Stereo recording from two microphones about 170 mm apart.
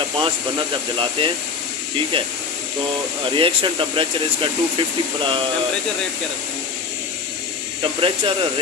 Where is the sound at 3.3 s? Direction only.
30° right (ahead or behind).